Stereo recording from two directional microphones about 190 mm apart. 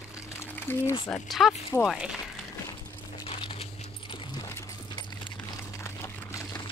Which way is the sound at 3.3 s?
30° left (ahead or behind).